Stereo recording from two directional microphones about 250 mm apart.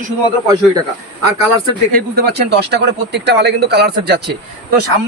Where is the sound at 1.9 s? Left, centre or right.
Right.